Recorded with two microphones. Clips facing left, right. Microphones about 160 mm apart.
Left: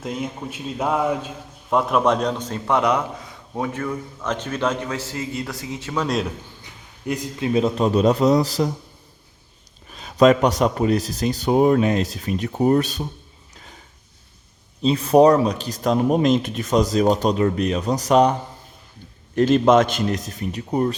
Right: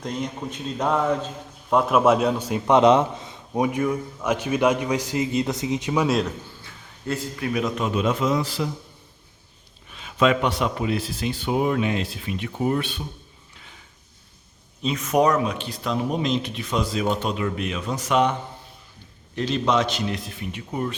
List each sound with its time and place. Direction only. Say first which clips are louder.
0.0 s speech: left 1 dB; 5° left (ahead or behind)
1.7 s a man's voice: right 1 dB; centre (ahead or behind)
6.2 s a man's voice: left 1 dB; 15° left (ahead or behind); by 8.7 s 40° left (ahead or behind)
9.9 s speech: left 6 dB; 40° left (ahead or behind)
14.8 s speech: left 7 dB; 30° left (ahead or behind)
19.4 s a man's voice: left 7 dB; 50° left (ahead or behind)